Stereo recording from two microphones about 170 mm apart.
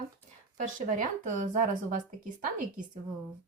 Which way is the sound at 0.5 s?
50° right (ahead or behind).